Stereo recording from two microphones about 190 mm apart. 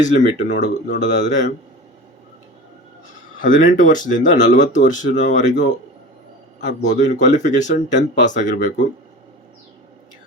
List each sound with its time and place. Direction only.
0.0 s speech: 40° left (ahead or behind)
3.4 s speech: 45° left (ahead or behind)
6.6 s speech: 40° left (ahead or behind)